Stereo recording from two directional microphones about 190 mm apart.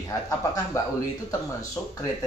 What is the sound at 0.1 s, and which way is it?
Speech, 20° left (ahead or behind).